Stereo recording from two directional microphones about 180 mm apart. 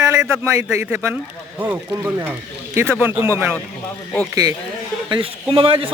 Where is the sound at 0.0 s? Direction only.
15° right (ahead or behind).